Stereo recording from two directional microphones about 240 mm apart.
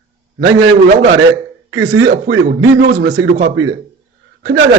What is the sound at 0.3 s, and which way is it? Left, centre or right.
Speech, right.